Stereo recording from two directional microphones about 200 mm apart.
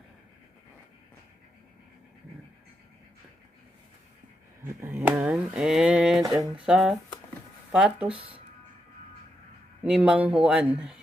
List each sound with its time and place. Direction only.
4.8 s a sound: 10° right (ahead or behind)
6.3 s speech: 5° right (ahead or behind)
8.1 s speech: 30° right (ahead or behind)
9.8 s speech: 5° right (ahead or behind)